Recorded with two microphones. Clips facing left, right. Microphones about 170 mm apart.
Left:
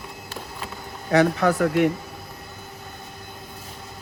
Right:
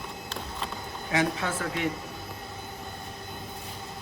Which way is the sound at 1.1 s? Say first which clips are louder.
Left 9 dB; 65° left (ahead or behind).